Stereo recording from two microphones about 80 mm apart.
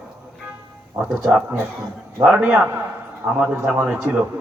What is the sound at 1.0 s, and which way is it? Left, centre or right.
A man's voice, centre.